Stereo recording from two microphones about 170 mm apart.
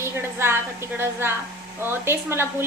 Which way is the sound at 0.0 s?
15° right (ahead or behind).